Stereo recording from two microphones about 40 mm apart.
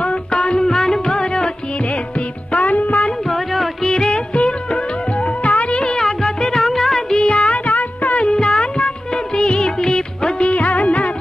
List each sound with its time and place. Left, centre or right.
0.0 s music: left
1.9 s music: left
3.0 s a sound: centre
3.8 s music: centre
5.9 s music: centre
7.1 s music: left
7.4 s music: left
8.3 s music: centre
10.5 s music of bollywood: left